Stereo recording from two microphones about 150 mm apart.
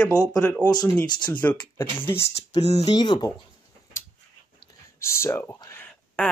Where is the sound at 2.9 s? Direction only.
30° left (ahead or behind).